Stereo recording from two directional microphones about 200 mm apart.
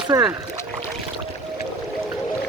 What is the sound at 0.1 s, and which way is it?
Speech, 15° right (ahead or behind).